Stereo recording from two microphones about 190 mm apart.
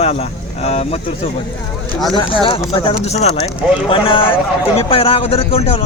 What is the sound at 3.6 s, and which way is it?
Speech, 5° right (ahead or behind).